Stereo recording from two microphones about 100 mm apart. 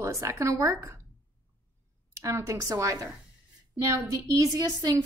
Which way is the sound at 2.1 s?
30° right (ahead or behind).